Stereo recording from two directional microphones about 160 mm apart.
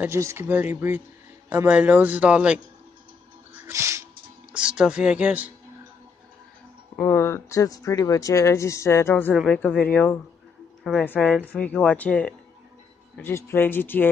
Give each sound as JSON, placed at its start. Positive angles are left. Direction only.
{"t": 0.0, "sound": "a man's voice", "side_deg": -15}
{"t": 3.6, "sound": "music", "side_deg": -15}
{"t": 4.5, "sound": "a man's voice", "side_deg": -5}
{"t": 7.0, "sound": "speech", "side_deg": 15}